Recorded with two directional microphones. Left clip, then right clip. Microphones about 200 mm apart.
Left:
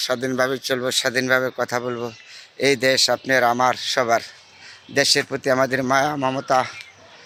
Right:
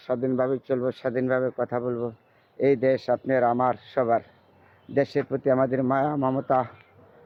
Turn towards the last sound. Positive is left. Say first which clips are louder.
# left 4 dB
turn(degrees=10)  # may be behind; listen again after turning